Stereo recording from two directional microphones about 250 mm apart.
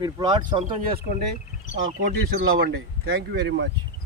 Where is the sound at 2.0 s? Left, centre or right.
Right.